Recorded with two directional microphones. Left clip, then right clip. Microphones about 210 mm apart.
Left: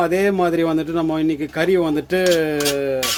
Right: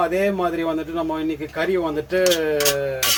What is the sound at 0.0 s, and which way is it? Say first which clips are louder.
A man's voice: left 3 dB; 55° left (ahead or behind).